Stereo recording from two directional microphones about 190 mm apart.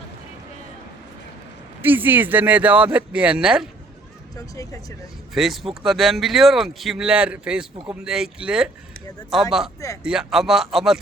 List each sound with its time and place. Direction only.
1.8 s speech: 10° right (ahead or behind)
4.4 s speech: 15° left (ahead or behind)
5.3 s speech: centre (ahead or behind)